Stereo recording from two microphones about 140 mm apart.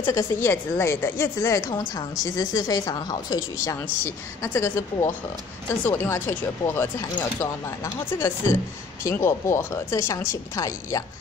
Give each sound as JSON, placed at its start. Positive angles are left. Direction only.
{"t": 0.0, "sound": "a woman's voice", "side_deg": 20}